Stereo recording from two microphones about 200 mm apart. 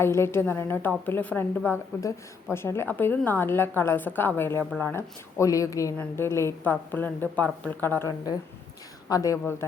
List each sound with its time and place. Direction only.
0.0 s a woman's voice: 10° left (ahead or behind)